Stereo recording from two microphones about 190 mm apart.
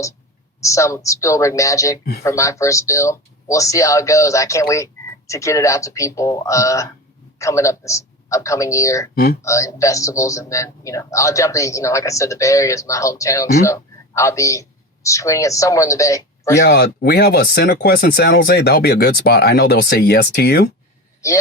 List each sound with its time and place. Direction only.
0.6 s speech: 15° left (ahead or behind)
9.1 s speech: 55° left (ahead or behind)
9.4 s a woman's voice: 15° left (ahead or behind)
16.6 s speech: 60° left (ahead or behind)